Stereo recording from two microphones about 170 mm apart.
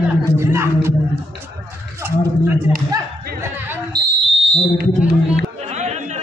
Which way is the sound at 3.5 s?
10° right (ahead or behind).